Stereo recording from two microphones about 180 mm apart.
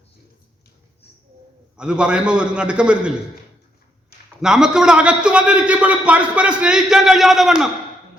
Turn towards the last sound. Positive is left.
turn(degrees=0)  # may be behind; listen again after turning